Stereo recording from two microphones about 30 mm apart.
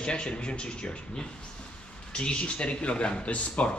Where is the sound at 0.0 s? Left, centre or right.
Left.